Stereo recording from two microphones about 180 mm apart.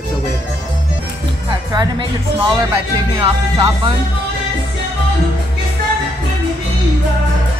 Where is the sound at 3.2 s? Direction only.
25° right (ahead or behind).